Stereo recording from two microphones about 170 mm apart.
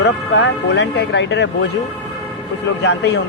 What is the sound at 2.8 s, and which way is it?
Speech, 90° left.